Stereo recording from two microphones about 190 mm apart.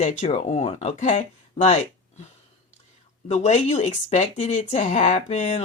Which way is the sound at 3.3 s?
35° left (ahead or behind).